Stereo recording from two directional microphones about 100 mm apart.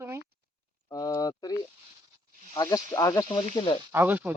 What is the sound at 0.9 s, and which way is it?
Speech, 35° left (ahead or behind).